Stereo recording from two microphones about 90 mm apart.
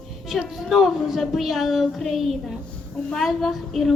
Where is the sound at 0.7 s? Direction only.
Centre (ahead or behind).